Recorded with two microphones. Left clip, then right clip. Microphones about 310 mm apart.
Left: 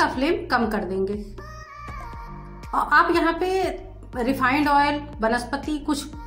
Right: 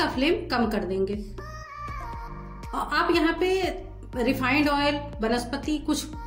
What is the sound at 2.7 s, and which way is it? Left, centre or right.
A woman's voice, centre.